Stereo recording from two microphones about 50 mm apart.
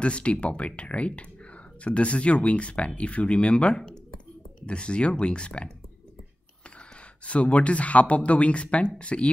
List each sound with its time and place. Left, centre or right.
0.0 s speech: left
7.2 s speech: left